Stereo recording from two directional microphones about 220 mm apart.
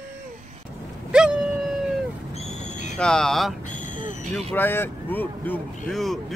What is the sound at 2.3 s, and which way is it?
Owl, 30° left (ahead or behind).